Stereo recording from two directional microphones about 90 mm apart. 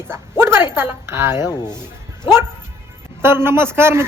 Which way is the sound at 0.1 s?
25° right (ahead or behind).